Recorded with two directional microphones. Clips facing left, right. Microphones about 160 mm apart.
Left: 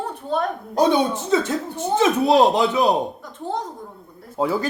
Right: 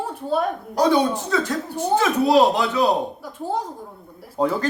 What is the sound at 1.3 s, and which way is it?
Speech, 20° left (ahead or behind).